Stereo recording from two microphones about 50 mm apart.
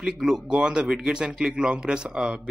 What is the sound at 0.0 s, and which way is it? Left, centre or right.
Speech, centre.